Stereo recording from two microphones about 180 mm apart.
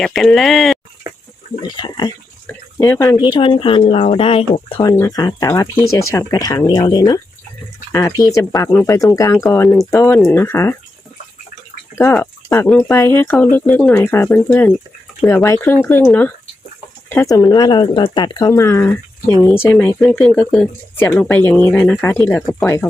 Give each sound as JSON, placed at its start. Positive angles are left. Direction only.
{"t": 0.0, "sound": "speech", "side_deg": 0}
{"t": 1.6, "sound": "speech", "side_deg": 25}
{"t": 4.9, "sound": "speech", "side_deg": 20}
{"t": 10.2, "sound": "speech", "side_deg": 5}
{"t": 12.1, "sound": "speech", "side_deg": 10}
{"t": 17.1, "sound": "speech", "side_deg": 15}